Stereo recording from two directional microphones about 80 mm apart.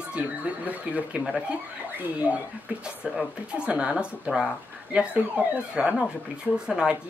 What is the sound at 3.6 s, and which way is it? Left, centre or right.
Speech, centre.